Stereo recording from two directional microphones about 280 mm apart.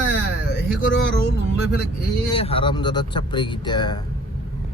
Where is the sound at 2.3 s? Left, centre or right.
Centre.